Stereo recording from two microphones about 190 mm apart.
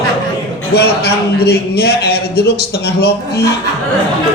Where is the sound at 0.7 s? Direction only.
60° left (ahead or behind).